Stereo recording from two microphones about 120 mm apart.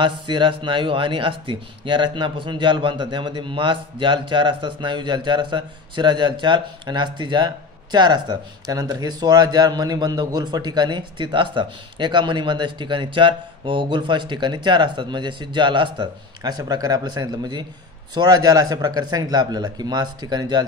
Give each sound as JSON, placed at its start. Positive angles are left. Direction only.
{"t": 0.0, "sound": "a man's voice", "side_deg": -40}